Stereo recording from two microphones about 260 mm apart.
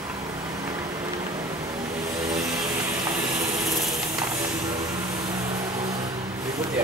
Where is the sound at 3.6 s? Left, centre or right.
Centre.